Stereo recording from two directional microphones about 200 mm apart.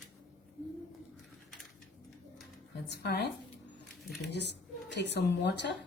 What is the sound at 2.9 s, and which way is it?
Speech, 55° left (ahead or behind).